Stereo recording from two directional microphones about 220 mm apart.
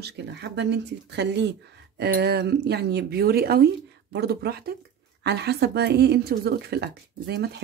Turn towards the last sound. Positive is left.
turn(degrees=-50)  # may be behind; listen again after turning